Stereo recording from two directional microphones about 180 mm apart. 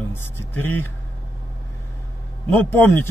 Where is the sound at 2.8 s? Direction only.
10° left (ahead or behind).